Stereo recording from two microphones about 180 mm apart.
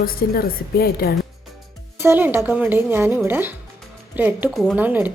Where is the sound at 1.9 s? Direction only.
10° right (ahead or behind).